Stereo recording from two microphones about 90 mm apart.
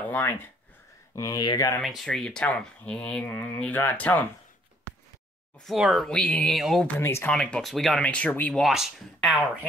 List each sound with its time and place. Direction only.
0.0 s a sound: 20° left (ahead or behind)
1.1 s speech: 40° left (ahead or behind)
1.8 s speech: centre (ahead or behind); by 4.3 s 20° left (ahead or behind)
5.7 s speech: centre (ahead or behind)
6.5 s speech: centre (ahead or behind)
7.0 s speech: 30° left (ahead or behind)
7.2 s speech: 10° left (ahead or behind)
8.0 s speech: 15° left (ahead or behind)
8.5 s speech: 5° right (ahead or behind)